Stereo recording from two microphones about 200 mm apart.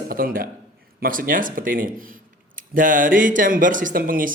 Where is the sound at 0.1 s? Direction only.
45° right (ahead or behind).